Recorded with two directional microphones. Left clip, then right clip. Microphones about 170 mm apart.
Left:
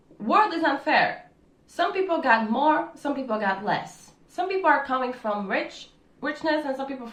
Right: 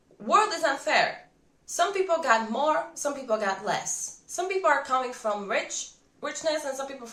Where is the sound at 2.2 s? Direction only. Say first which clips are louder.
Left 6 dB; 5° right (ahead or behind).